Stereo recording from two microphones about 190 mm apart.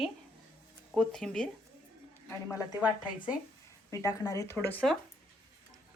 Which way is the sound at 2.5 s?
20° left (ahead or behind).